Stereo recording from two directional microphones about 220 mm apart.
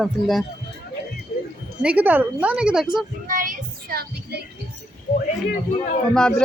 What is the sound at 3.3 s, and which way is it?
Child singing, 40° right (ahead or behind).